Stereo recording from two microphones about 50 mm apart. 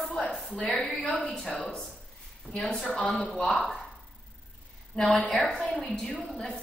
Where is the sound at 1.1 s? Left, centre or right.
Centre.